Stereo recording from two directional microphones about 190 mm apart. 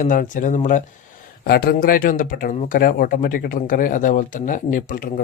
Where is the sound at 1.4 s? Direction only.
55° left (ahead or behind).